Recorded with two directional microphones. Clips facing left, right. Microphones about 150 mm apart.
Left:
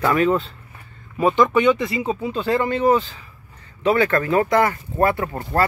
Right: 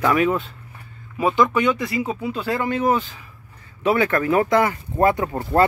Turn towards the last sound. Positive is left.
turn(degrees=-15)  # may be behind; listen again after turning